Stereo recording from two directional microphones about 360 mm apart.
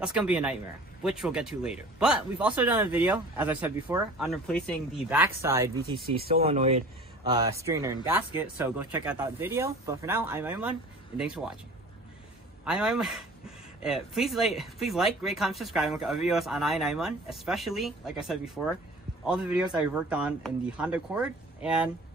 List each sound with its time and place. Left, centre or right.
0.0 s speech: centre
6.2 s speech: right; by 11.5 s centre
12.6 s speech: centre